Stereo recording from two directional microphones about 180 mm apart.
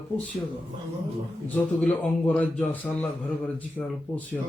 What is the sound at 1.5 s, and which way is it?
Speech, 10° left (ahead or behind).